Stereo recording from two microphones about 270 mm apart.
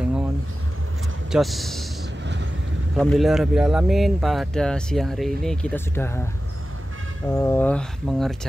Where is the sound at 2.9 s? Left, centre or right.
Centre.